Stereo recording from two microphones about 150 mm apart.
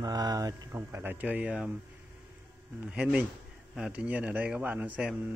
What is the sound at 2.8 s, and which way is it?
A man's voice, 5° right (ahead or behind).